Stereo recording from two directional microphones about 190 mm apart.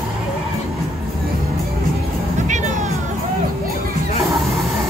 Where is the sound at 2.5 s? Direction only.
40° right (ahead or behind).